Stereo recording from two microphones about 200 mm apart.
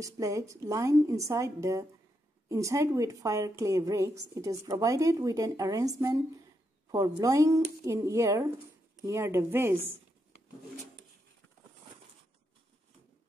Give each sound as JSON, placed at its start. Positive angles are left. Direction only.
{"t": 0.0, "sound": "a woman's voice", "side_deg": -15}